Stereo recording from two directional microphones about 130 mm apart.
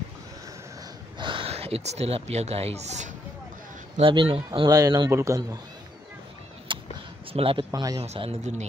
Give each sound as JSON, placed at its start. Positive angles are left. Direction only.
{"t": 1.1, "sound": "speech", "side_deg": -40}
{"t": 4.0, "sound": "a man's voice", "side_deg": -40}
{"t": 6.7, "sound": "a sound", "side_deg": -40}
{"t": 7.3, "sound": "speech", "side_deg": -45}
{"t": 7.7, "sound": "speech", "side_deg": -30}
{"t": 8.0, "sound": "speech", "side_deg": -50}